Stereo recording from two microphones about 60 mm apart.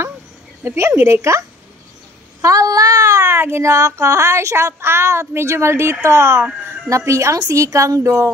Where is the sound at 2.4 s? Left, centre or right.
Right.